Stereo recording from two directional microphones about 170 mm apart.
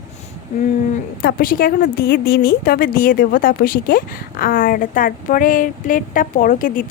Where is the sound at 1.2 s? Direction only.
65° left (ahead or behind).